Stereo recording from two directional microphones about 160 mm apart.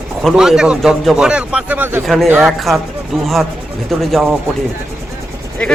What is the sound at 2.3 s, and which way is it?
Speech, 15° right (ahead or behind).